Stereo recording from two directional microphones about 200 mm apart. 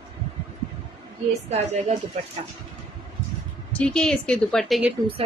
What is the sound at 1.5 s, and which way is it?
Speech, 35° right (ahead or behind).